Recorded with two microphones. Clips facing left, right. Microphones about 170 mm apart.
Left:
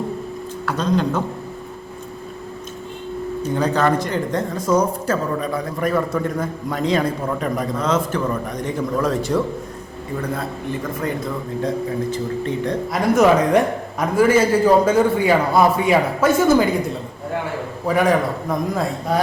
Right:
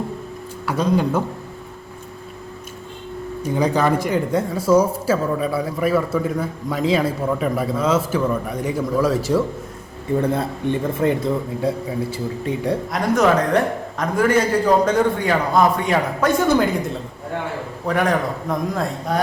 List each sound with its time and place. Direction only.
0.6 s speech: 10° right (ahead or behind)
3.4 s speech: 10° right (ahead or behind)
10.2 s speech: 30° right (ahead or behind)
11.6 s speech: 10° right (ahead or behind)
12.9 s a man's voice: 10° left (ahead or behind)